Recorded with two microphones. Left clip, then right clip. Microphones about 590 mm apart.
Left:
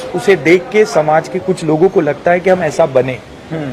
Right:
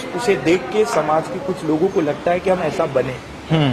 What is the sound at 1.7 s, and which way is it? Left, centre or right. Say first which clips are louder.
A man's voice: left 7 dB; left.